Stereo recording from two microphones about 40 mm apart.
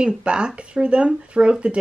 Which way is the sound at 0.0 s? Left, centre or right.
Right.